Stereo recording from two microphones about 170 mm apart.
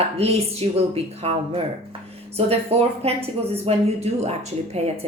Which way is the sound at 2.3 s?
35° right (ahead or behind).